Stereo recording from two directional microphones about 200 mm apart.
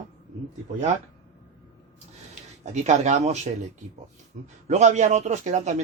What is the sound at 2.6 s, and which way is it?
Speech, 35° right (ahead or behind).